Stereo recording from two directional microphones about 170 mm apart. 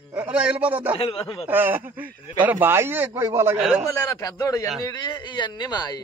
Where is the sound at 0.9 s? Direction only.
35° left (ahead or behind).